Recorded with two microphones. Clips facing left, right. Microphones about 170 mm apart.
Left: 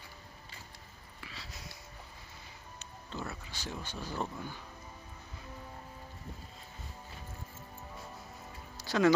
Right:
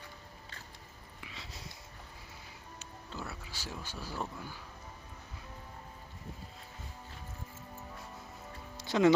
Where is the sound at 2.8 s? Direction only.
10° right (ahead or behind).